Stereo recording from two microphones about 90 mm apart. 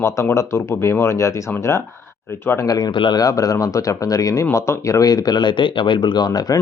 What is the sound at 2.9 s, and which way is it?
Speech, 65° left (ahead or behind).